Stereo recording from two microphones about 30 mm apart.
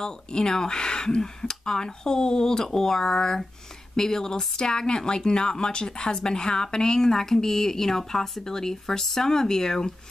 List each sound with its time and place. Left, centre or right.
0.0 s a woman's voice: left